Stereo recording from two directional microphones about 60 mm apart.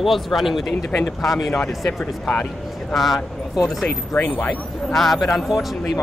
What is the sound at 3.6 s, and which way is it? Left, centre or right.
Speech, centre.